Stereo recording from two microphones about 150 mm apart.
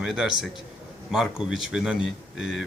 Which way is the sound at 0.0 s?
5° right (ahead or behind).